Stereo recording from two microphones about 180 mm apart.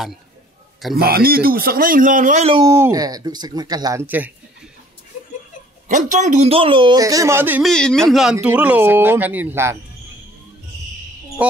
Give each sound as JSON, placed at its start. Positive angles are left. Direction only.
{"t": 0.9, "sound": "speech", "side_deg": -60}
{"t": 2.5, "sound": "a man's voice", "side_deg": -15}
{"t": 5.9, "sound": "a man's voice", "side_deg": -45}
{"t": 7.6, "sound": "speech", "side_deg": 5}